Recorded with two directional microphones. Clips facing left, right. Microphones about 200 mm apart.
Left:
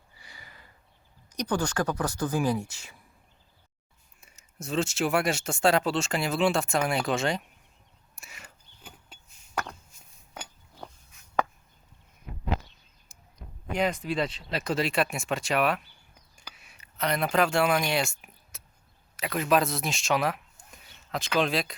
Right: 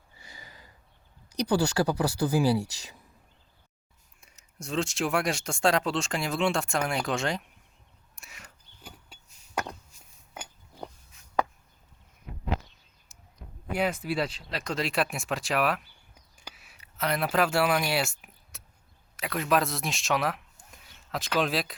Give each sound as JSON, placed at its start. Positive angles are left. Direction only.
{"t": 0.2, "sound": "snort", "side_deg": -20}
{"t": 1.5, "sound": "speech", "side_deg": -10}
{"t": 4.2, "sound": "speech", "side_deg": 5}
{"t": 8.1, "sound": "a sound", "side_deg": 0}
{"t": 13.7, "sound": "speech", "side_deg": -5}
{"t": 16.6, "sound": "a sound", "side_deg": 0}
{"t": 19.1, "sound": "speech", "side_deg": 0}